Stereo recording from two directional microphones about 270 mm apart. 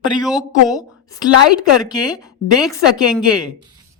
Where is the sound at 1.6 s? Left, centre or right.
Centre.